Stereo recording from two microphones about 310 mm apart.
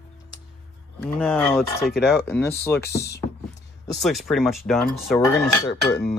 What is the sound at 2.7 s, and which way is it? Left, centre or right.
Speech, left.